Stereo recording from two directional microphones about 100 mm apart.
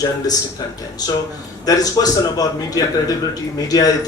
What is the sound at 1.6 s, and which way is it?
Speech, 40° left (ahead or behind).